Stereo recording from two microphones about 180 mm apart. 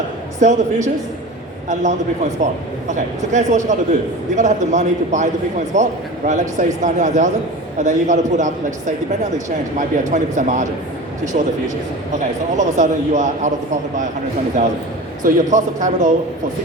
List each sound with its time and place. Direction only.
0.3 s a man's voice: 40° right (ahead or behind)
9.7 s speech: 45° right (ahead or behind)
12.5 s speech: 45° right (ahead or behind)
15.2 s speech: 45° right (ahead or behind)